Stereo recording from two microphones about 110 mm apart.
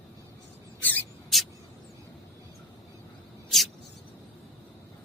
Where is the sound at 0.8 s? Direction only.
15° left (ahead or behind).